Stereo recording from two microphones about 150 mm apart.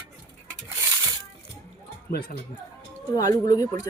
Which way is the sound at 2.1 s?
90° left.